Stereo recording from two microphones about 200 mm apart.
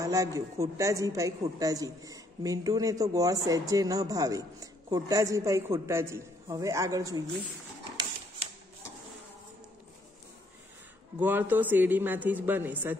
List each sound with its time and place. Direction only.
0.0 s a woman's voice: 15° right (ahead or behind)
11.1 s a woman's voice: 10° right (ahead or behind)